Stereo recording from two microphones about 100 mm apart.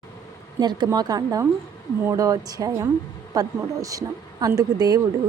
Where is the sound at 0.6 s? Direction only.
45° right (ahead or behind).